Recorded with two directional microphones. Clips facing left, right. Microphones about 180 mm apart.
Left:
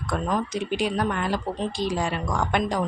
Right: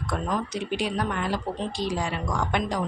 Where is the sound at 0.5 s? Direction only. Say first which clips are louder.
Left 2 dB; 50° left (ahead or behind).